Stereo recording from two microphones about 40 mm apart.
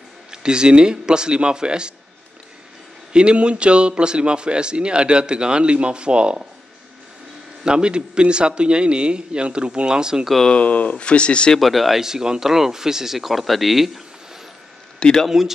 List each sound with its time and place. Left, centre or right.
0.3 s a man's voice: right
3.1 s a man's voice: right
7.6 s a man's voice: right
10.5 s speech: left
11.6 s speech: centre
12.0 s speech: centre
15.0 s speech: centre
15.2 s speech: centre